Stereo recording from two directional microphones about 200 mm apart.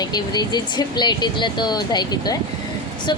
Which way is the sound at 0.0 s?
20° left (ahead or behind).